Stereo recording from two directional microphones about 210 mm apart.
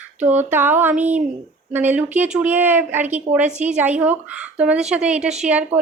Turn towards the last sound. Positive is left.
turn(degrees=-5)  # may be behind; listen again after turning